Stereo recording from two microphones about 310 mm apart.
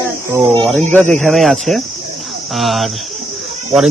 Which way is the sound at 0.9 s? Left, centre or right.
Centre.